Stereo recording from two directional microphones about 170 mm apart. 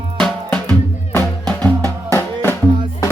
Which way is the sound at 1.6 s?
20° right (ahead or behind).